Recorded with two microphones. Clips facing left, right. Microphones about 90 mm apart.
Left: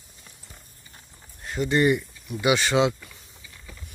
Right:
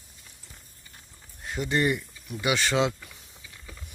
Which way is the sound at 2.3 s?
15° left (ahead or behind).